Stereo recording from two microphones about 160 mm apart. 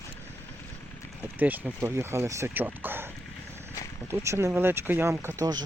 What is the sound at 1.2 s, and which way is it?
Speech, 10° right (ahead or behind).